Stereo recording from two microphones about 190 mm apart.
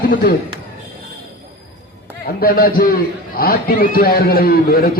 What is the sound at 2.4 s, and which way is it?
A man's voice, 50° left (ahead or behind).